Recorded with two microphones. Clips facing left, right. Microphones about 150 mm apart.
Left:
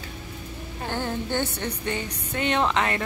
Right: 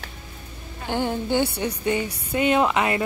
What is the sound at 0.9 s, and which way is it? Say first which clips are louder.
Speech: right 5 dB; 15° right (ahead or behind).